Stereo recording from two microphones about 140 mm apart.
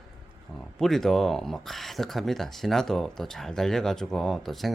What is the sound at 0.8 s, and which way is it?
Speech, centre (ahead or behind).